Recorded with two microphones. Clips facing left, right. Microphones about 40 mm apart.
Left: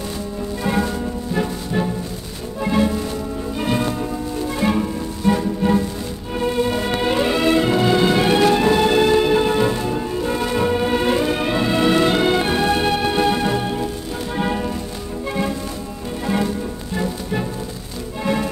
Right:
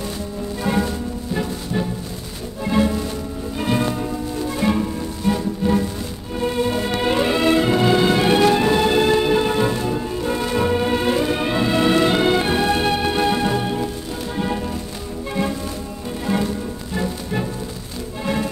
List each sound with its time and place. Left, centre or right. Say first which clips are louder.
0.7 s music: left 1 dB; centre
6.4 s music: left 1 dB; centre
14.3 s music: left 2 dB; centre
16.9 s music: left 1 dB; centre